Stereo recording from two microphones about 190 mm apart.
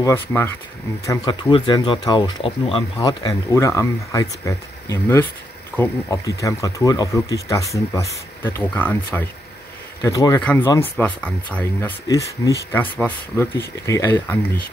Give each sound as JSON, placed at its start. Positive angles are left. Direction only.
{"t": 0.0, "sound": "speech", "side_deg": 10}
{"t": 10.4, "sound": "speech", "side_deg": 5}